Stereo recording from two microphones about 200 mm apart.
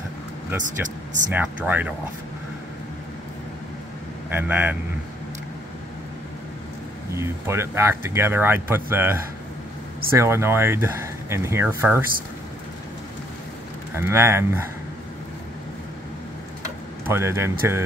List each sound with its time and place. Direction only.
0.7 s speech: 40° right (ahead or behind)
1.3 s speech: 10° right (ahead or behind)
4.3 s speech: 10° right (ahead or behind)
7.2 s speech: 10° right (ahead or behind)
13.9 s speech: 15° right (ahead or behind)
17.0 s speech: 10° right (ahead or behind)